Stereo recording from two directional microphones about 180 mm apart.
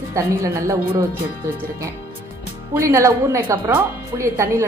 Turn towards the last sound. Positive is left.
turn(degrees=-15)  # may be behind; listen again after turning